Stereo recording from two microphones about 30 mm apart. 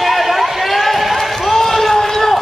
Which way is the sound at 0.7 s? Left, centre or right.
Centre.